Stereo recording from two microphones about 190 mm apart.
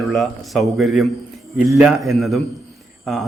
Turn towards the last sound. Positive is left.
turn(degrees=0)  # may be behind; listen again after turning